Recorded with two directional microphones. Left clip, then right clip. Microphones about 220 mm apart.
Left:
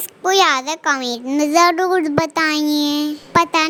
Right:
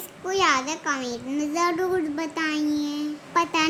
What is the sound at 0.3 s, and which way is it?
A child's voice, 40° left (ahead or behind).